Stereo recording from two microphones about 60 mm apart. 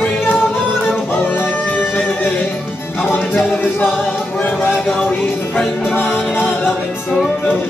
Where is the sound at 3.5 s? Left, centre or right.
Left.